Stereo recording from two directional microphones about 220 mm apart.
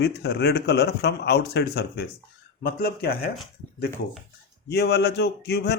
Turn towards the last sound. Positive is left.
turn(degrees=50)  # may be behind; listen again after turning